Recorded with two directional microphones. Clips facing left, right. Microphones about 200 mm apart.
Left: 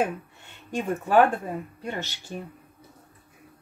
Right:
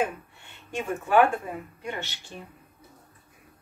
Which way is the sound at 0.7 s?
40° left (ahead or behind).